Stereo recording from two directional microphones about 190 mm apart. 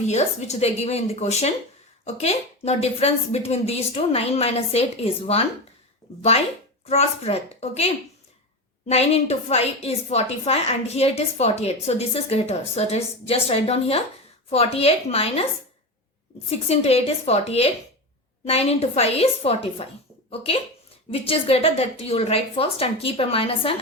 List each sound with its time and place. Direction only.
0.1 s a woman's voice: 35° left (ahead or behind)
6.8 s a woman's voice: 35° left (ahead or behind)
16.5 s a woman's voice: 35° left (ahead or behind)